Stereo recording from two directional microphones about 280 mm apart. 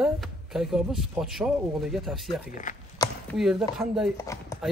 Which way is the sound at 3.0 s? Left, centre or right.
Centre.